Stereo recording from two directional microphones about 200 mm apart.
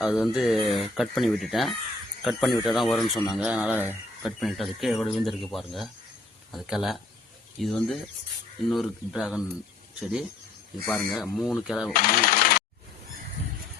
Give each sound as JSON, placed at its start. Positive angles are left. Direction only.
{"t": 0.0, "sound": "speech", "side_deg": 0}
{"t": 11.9, "sound": "speech", "side_deg": 45}